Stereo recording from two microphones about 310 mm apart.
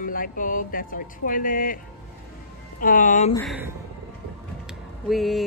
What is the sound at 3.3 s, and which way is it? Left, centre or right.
Speech, centre.